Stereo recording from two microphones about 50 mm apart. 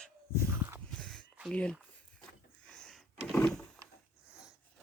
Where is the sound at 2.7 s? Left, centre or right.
Centre.